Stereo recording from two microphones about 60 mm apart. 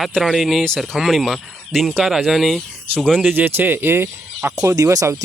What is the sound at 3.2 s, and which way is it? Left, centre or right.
Speech, right.